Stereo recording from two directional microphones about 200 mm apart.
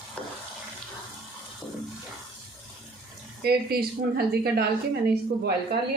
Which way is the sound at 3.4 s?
50° right (ahead or behind).